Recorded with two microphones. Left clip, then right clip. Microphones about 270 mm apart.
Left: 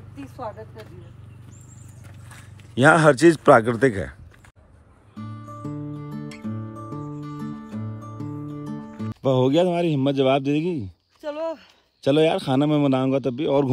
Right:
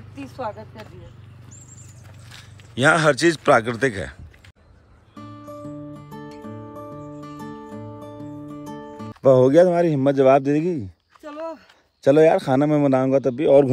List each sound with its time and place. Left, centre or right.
0.1 s speech: right
2.3 s a man's voice: centre
5.4 s music: centre
8.3 s speech: centre